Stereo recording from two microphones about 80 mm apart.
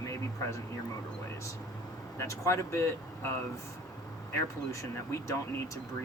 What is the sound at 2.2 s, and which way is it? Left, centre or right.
Speech, left.